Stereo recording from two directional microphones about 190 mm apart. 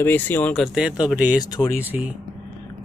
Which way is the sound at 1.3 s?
20° left (ahead or behind).